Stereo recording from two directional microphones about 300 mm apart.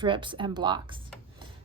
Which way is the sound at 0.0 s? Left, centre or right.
Centre.